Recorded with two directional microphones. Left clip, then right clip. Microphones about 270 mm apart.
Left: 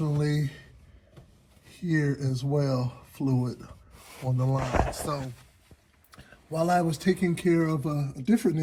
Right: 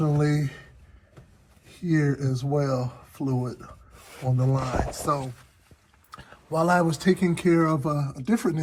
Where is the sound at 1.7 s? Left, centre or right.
Centre.